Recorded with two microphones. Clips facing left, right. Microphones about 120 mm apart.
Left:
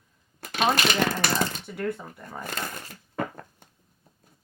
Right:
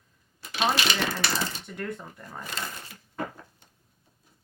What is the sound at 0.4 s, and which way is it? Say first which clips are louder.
Speech: left 2 dB; 50° left (ahead or behind).